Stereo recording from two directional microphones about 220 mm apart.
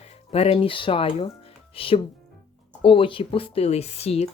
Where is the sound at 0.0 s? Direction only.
30° left (ahead or behind).